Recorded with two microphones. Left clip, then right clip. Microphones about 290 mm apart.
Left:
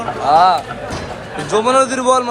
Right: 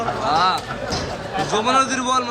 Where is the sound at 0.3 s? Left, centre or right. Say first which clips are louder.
Left 9 dB; centre.